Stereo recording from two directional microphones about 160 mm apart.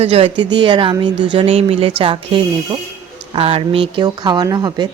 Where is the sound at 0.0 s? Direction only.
40° right (ahead or behind).